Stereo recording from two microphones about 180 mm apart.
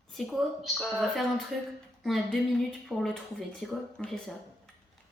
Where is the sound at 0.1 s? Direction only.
Centre (ahead or behind).